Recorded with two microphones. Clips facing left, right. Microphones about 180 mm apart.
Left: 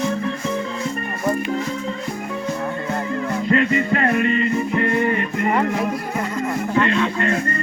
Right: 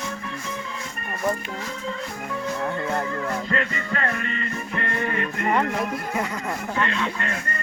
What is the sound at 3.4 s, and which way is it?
Music, 20° left (ahead or behind).